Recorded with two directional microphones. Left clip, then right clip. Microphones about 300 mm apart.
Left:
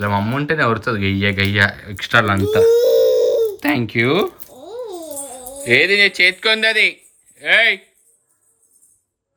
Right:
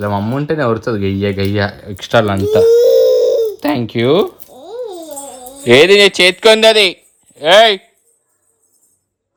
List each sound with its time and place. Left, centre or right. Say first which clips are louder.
0.0 s speech: right 2 dB; centre
5.3 s speech: right 6 dB; centre